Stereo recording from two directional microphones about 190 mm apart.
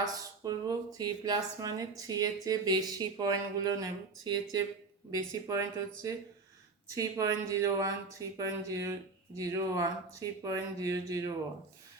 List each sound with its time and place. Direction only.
0.0 s speech: 20° right (ahead or behind)